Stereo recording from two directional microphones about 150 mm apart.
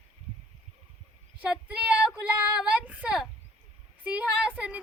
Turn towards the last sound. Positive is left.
turn(degrees=-10)  # may be behind; listen again after turning